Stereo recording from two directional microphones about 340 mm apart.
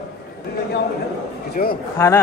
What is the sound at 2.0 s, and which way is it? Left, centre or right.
Speech, centre.